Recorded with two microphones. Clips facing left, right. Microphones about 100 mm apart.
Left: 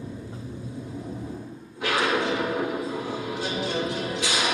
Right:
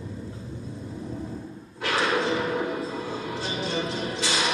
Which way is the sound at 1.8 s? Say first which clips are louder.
Left 1 dB; 15° left (ahead or behind).